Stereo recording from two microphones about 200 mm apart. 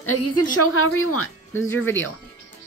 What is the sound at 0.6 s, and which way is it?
Speech, 90° left.